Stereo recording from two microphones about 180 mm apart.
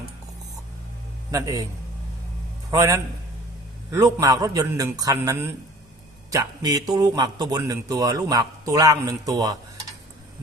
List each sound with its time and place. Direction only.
1.3 s a man's voice: 20° right (ahead or behind)
2.6 s a man's voice: 20° right (ahead or behind)